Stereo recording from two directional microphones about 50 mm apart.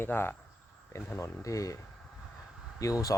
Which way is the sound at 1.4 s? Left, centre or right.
Left.